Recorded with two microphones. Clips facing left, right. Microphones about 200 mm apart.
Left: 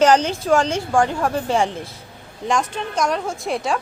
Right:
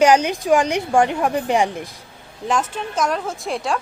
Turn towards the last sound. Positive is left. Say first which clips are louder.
# left 1 dB
turn(degrees=0)  # may be behind; listen again after turning